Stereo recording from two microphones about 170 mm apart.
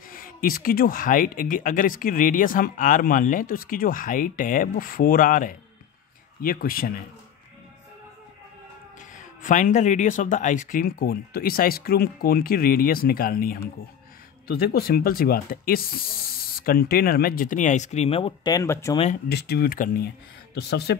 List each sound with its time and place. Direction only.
0.1 s speech: 55° left (ahead or behind)
9.1 s speech: 45° left (ahead or behind); by 18.9 s 15° left (ahead or behind)
19.2 s speech: 70° left (ahead or behind)
20.5 s speech: 70° left (ahead or behind)